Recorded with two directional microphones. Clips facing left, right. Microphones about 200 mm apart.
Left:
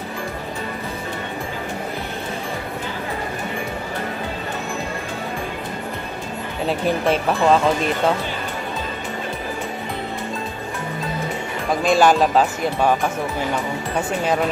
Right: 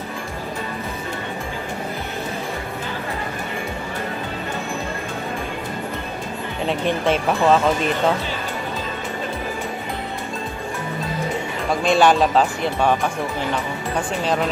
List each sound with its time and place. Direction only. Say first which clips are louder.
6.7 s speech: left 1 dB; centre (ahead or behind)
11.8 s speech: even; centre (ahead or behind)
13.9 s speech: left 1 dB; 5° left (ahead or behind)